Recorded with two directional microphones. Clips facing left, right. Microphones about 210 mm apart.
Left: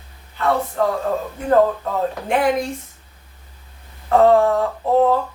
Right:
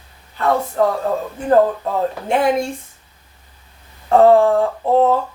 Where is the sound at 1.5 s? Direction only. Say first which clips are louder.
Right 2 dB; 25° right (ahead or behind).